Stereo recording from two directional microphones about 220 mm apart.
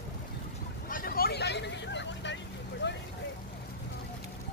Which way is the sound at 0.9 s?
40° left (ahead or behind).